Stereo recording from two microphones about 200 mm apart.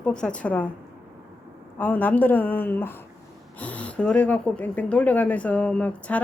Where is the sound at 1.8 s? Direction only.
10° left (ahead or behind).